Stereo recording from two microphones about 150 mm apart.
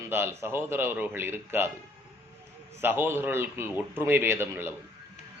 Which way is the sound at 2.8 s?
15° right (ahead or behind).